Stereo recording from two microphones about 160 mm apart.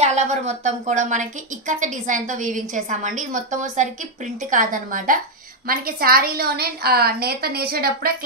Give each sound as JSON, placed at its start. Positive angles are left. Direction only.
{"t": 0.0, "sound": "a woman's voice", "side_deg": -45}